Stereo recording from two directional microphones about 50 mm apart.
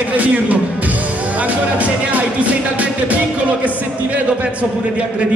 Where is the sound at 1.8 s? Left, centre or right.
Right.